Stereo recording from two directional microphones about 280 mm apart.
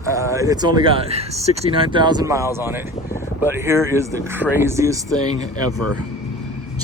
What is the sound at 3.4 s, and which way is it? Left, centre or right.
Speech, centre.